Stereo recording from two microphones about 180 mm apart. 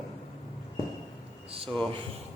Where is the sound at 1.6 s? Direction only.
Centre (ahead or behind).